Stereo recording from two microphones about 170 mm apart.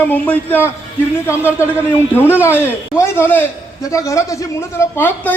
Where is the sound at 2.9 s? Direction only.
15° left (ahead or behind).